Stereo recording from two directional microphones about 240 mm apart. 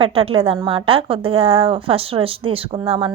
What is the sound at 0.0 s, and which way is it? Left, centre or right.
Speech, right.